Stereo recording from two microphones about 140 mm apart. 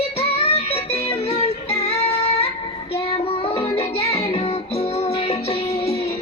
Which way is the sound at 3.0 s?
40° left (ahead or behind).